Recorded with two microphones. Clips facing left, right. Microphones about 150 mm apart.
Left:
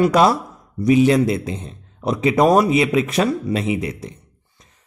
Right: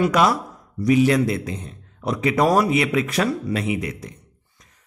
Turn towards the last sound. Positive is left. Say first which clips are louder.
# left 1 dB
turn(degrees=25)  # may be behind; listen again after turning